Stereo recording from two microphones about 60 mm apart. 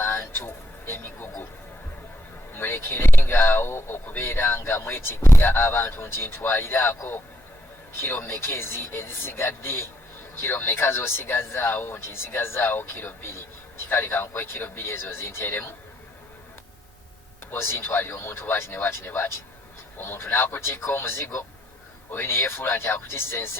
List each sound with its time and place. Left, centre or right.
0.0 s a sound: left
2.6 s speech: left
17.5 s speech: left